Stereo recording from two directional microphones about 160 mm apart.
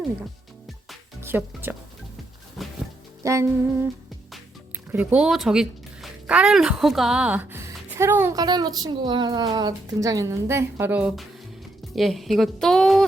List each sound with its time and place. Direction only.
1.2 s speech: 15° right (ahead or behind)
2.6 s music: centre (ahead or behind)
3.2 s music: 20° right (ahead or behind)
4.9 s a woman's voice: 10° right (ahead or behind)